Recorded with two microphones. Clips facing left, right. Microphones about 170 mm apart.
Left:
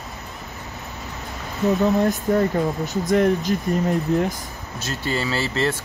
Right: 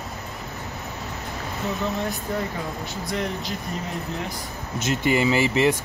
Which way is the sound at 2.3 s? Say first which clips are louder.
Left 9 dB; 45° left (ahead or behind).